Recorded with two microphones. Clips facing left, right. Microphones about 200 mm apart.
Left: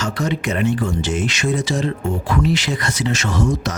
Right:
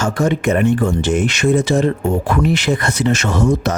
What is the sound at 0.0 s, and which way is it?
Speech, 50° right (ahead or behind).